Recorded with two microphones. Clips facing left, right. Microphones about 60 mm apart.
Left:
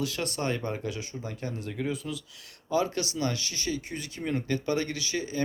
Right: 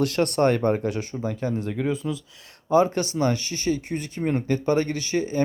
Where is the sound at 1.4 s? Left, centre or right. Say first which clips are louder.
Right 6 dB; right.